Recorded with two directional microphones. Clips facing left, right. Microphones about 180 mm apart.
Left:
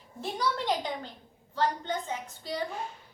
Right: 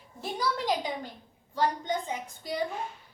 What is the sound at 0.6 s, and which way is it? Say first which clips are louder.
A woman's voice: right 1 dB; 10° right (ahead or behind).